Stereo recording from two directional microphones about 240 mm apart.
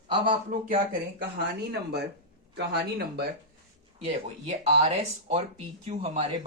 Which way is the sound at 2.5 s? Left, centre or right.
Right.